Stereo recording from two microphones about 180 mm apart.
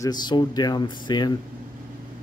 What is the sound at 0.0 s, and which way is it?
Speech, 25° left (ahead or behind).